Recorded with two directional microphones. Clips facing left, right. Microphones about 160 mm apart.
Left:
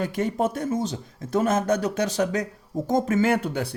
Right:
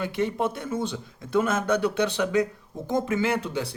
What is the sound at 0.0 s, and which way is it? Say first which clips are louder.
Speech: left 2 dB; 45° left (ahead or behind).